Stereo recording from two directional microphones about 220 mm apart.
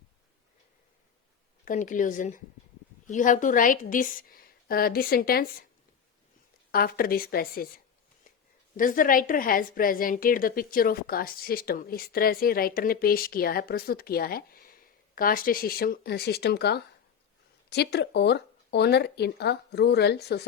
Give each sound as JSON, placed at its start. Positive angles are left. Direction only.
{"t": 1.6, "sound": "a woman's voice", "side_deg": 35}
{"t": 6.7, "sound": "speech", "side_deg": 45}
{"t": 8.7, "sound": "a woman's voice", "side_deg": 40}